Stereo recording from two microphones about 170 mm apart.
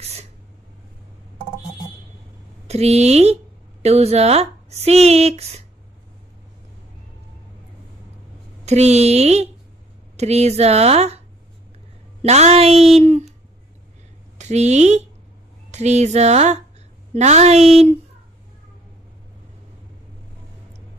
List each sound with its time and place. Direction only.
0.0 s a sound: 40° right (ahead or behind)
2.7 s speech: 40° right (ahead or behind)
8.6 s speech: 40° right (ahead or behind)
14.4 s speech: 40° right (ahead or behind)